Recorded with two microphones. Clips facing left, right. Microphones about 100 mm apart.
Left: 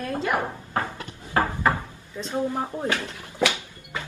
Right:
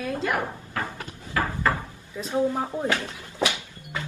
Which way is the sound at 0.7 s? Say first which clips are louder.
Left 4 dB; 25° left (ahead or behind).